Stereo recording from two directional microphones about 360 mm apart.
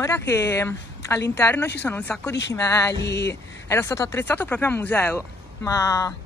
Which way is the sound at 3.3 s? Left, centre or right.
Centre.